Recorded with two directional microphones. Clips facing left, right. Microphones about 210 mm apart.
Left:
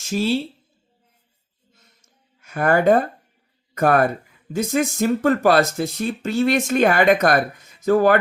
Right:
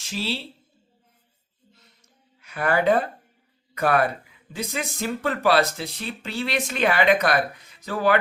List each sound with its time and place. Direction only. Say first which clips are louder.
0.0 s a woman's voice: left 9 dB; 45° left (ahead or behind)
2.4 s speech: left 5 dB; 45° left (ahead or behind)